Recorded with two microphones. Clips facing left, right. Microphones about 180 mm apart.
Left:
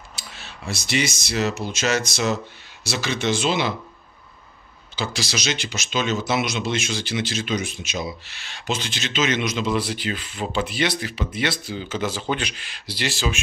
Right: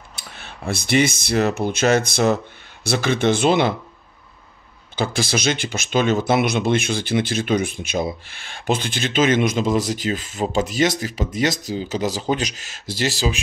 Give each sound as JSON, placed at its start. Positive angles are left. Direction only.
{"t": 0.1, "sound": "speech", "side_deg": -55}
{"t": 4.9, "sound": "speech", "side_deg": -55}